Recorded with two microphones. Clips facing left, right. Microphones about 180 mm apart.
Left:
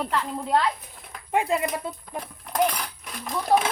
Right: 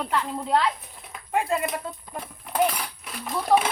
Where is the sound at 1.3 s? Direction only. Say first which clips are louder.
Left 1 dB; 20° left (ahead or behind).